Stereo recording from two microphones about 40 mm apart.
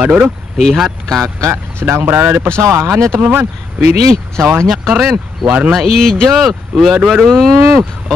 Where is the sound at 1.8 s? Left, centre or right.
Right.